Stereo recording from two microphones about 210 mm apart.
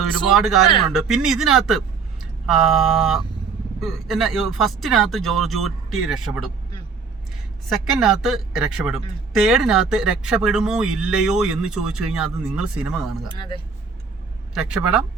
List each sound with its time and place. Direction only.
0.3 s speech: centre (ahead or behind)
7.7 s speech: centre (ahead or behind)
13.3 s speech: 20° left (ahead or behind)
14.5 s speech: 5° right (ahead or behind)